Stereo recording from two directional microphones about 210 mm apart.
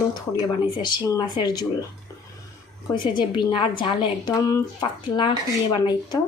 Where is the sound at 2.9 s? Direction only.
20° left (ahead or behind).